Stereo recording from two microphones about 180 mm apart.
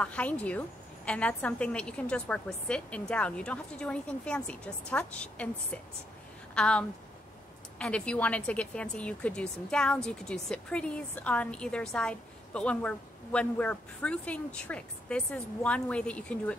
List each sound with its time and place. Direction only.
0.0 s a woman's voice: 10° left (ahead or behind)